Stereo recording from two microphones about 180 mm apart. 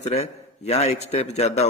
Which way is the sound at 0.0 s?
35° left (ahead or behind).